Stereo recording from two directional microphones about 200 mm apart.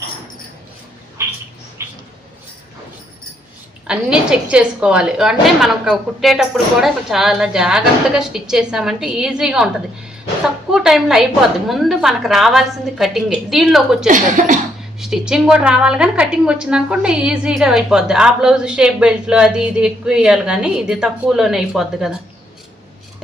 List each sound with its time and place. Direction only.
1.8 s mouse: 15° right (ahead or behind)
3.8 s a woman's voice: 5° right (ahead or behind)
10.7 s a woman's voice: centre (ahead or behind)
14.1 s speech: 40° right (ahead or behind)
14.9 s a woman's voice: centre (ahead or behind)